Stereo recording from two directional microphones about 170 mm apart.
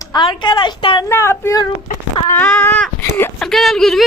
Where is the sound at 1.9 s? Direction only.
50° left (ahead or behind).